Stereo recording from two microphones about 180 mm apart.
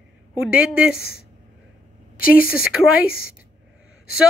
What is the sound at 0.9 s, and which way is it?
Speech, 60° left (ahead or behind).